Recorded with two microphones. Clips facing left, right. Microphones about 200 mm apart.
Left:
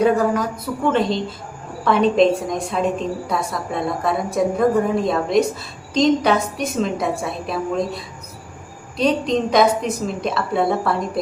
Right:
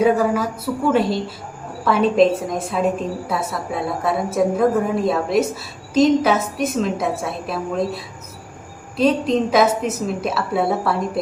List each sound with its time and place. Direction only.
0.0 s a woman's voice: 5° right (ahead or behind)